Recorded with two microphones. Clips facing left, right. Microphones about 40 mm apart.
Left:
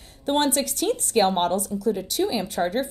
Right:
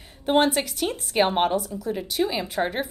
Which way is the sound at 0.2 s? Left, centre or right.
Centre.